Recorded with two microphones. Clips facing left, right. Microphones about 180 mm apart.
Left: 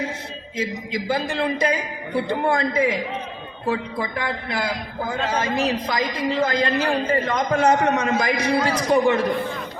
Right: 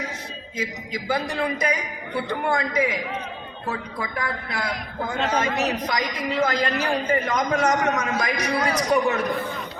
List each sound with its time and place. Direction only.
0.5 s a man's voice: 30° left (ahead or behind)